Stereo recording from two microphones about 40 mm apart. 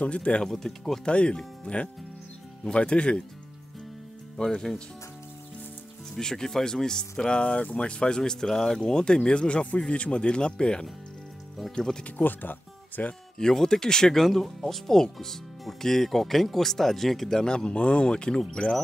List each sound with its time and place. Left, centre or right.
0.0 s speech: left
0.5 s speech: centre
1.0 s speech: left
4.4 s speech: centre
6.1 s speech: centre
12.2 s speech: left
13.4 s speech: centre
14.2 s speech: centre
17.4 s speech: centre